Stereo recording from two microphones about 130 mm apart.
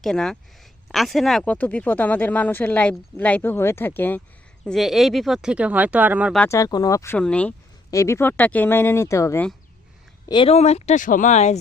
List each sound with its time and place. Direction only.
0.0 s speech: 5° left (ahead or behind)
4.6 s speech: centre (ahead or behind)
6.5 s speech: 30° left (ahead or behind)
7.2 s speech: 10° left (ahead or behind)
7.9 s speech: 20° left (ahead or behind)
10.2 s speech: 35° left (ahead or behind)
10.5 s speech: 55° left (ahead or behind)